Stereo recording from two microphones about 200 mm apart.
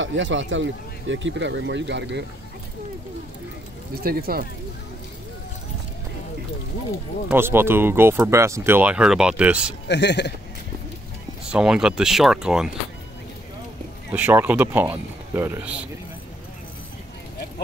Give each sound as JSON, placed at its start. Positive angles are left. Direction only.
{"t": 0.0, "sound": "speech", "side_deg": -70}
{"t": 4.0, "sound": "speech", "side_deg": -50}
{"t": 7.2, "sound": "speech", "side_deg": -10}
{"t": 9.8, "sound": "speech", "side_deg": 60}
{"t": 11.5, "sound": "speech", "side_deg": -5}
{"t": 14.1, "sound": "speech", "side_deg": -10}